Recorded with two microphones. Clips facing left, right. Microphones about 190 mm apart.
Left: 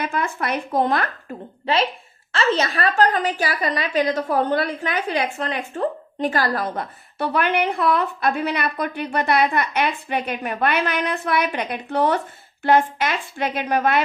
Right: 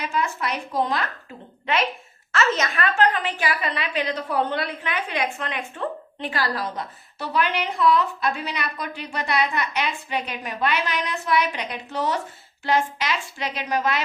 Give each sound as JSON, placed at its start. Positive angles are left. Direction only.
{"t": 0.0, "sound": "a woman's voice", "side_deg": 55}
{"t": 1.6, "sound": "a woman's voice", "side_deg": 30}